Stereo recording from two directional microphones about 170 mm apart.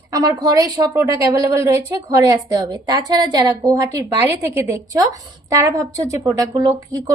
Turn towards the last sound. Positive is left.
turn(degrees=-20)  # may be behind; listen again after turning